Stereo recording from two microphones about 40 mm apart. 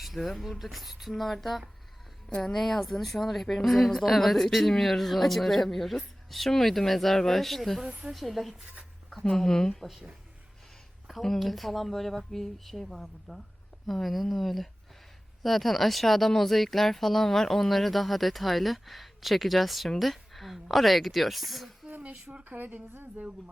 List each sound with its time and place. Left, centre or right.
0.0 s speech: centre
7.9 s a woman's voice: right
8.1 s speech: centre
9.3 s speech: centre
11.1 s speech: centre
22.3 s speech: right